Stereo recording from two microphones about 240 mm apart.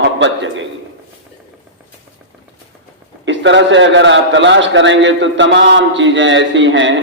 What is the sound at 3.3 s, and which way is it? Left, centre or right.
A man's voice, right.